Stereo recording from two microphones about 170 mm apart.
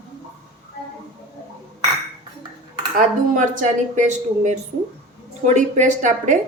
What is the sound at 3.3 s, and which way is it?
A woman's voice, 50° right (ahead or behind).